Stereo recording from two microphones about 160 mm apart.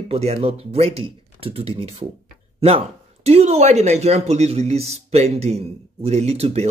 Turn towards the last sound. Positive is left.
turn(degrees=-40)  # may be behind; listen again after turning